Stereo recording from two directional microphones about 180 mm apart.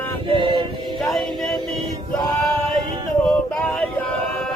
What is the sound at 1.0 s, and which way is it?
Music, centre (ahead or behind).